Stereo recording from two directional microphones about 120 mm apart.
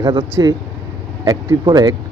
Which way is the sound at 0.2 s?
20° right (ahead or behind).